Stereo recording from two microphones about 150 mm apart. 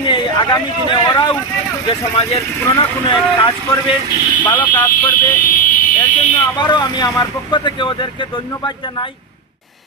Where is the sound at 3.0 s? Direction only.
25° left (ahead or behind).